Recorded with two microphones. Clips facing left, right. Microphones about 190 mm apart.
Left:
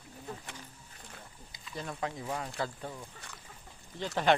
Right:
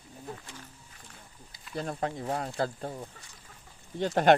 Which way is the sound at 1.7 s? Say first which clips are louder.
Right 5 dB; 35° right (ahead or behind).